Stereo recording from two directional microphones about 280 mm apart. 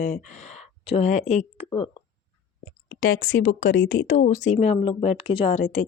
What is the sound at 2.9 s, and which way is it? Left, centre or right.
Speech, left.